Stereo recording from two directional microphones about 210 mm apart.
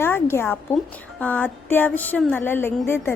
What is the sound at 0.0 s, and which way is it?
A woman's voice, 10° left (ahead or behind).